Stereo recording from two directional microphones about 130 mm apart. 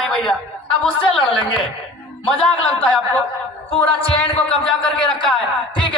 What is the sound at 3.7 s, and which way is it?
Speech, 45° left (ahead or behind).